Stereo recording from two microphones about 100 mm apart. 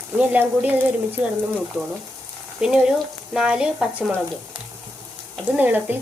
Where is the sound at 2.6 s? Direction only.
5° right (ahead or behind).